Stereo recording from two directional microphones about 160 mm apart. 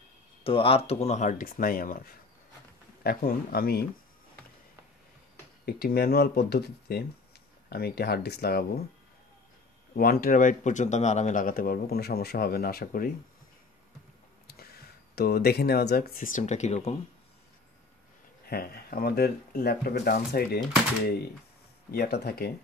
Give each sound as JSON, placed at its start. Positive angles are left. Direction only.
{"t": 0.4, "sound": "speech", "side_deg": 35}
{"t": 5.7, "sound": "speech", "side_deg": 75}
{"t": 9.9, "sound": "speech", "side_deg": 65}
{"t": 14.5, "sound": "speech", "side_deg": 75}
{"t": 18.5, "sound": "speech", "side_deg": 70}
{"t": 21.9, "sound": "speech", "side_deg": 75}